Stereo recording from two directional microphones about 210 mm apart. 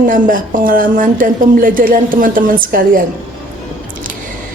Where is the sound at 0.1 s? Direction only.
40° right (ahead or behind).